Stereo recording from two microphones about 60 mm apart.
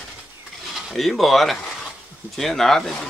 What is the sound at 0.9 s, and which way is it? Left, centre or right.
Speech, centre.